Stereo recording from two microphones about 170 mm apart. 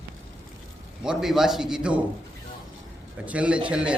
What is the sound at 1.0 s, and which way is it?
Speech, 5° right (ahead or behind).